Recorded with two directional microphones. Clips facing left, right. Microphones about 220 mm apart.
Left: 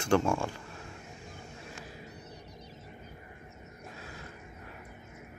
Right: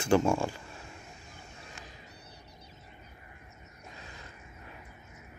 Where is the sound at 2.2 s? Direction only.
45° left (ahead or behind).